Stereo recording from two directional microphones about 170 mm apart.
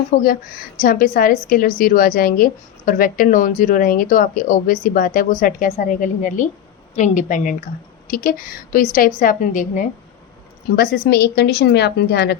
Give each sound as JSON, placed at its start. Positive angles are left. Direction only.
{"t": 0.2, "sound": "a woman's voice", "side_deg": 55}
{"t": 10.8, "sound": "a woman's voice", "side_deg": 70}